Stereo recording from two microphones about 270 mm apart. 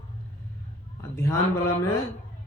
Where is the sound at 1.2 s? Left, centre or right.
Centre.